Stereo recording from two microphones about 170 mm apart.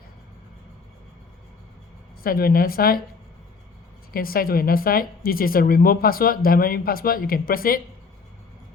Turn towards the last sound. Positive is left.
turn(degrees=60)  # may be behind; listen again after turning